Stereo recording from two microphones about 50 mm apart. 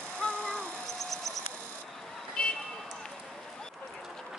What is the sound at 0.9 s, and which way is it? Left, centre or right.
Insect, centre.